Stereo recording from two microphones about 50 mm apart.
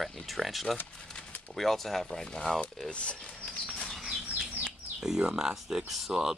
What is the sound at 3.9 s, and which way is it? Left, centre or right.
Bird, centre.